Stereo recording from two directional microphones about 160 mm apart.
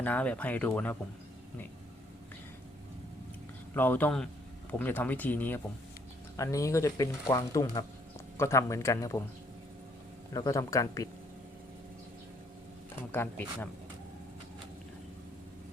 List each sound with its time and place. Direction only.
0.0 s speech: 10° left (ahead or behind)
3.8 s speech: 10° left (ahead or behind)
10.3 s speech: 20° left (ahead or behind)
13.0 s speech: 10° left (ahead or behind)